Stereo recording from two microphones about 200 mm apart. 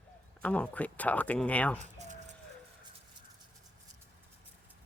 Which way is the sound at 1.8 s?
35° right (ahead or behind).